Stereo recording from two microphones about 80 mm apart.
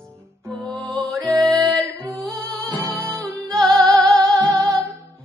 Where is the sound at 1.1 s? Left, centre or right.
Centre.